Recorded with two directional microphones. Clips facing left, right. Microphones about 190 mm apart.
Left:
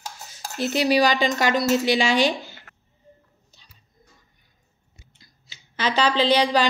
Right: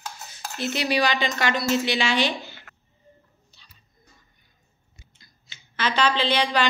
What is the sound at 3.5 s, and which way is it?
Music, 45° left (ahead or behind).